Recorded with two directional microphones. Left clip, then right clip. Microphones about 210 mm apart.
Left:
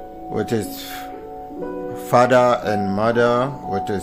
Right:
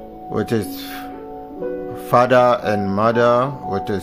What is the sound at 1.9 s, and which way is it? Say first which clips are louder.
Speech: even; 10° right (ahead or behind).